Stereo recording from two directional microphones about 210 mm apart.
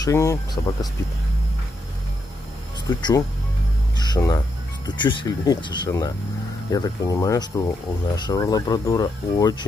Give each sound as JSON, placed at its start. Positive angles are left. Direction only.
{"t": 0.0, "sound": "speech", "side_deg": 15}
{"t": 3.0, "sound": "speech", "side_deg": 20}